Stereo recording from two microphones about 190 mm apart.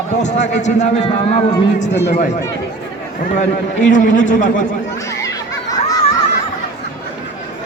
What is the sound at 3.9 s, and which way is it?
Speech, 45° left (ahead or behind).